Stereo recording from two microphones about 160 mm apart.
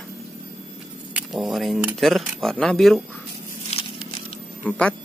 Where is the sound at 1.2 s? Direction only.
5° right (ahead or behind).